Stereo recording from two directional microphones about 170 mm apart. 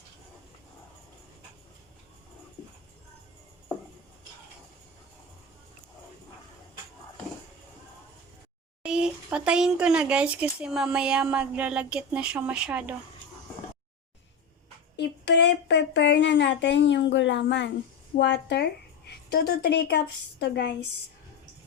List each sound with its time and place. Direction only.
8.8 s speech: 5° right (ahead or behind)
14.9 s speech: 85° left; by 20.0 s 70° left (ahead or behind)
20.4 s speech: 90° left